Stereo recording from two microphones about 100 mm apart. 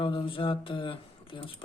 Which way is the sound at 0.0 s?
60° left (ahead or behind).